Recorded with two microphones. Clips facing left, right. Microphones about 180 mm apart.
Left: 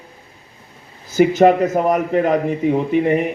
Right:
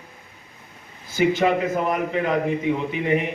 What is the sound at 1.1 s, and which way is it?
A man's voice, 40° left (ahead or behind).